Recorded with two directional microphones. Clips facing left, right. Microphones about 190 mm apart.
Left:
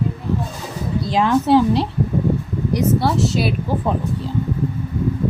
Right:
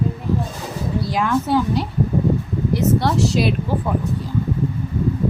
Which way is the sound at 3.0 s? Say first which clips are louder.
Even; centre (ahead or behind).